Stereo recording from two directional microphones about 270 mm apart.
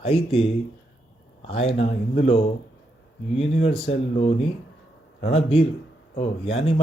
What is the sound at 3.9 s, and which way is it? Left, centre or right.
Speech, left.